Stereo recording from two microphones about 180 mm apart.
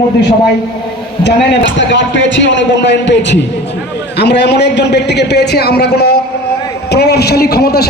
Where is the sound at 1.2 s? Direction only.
85° left.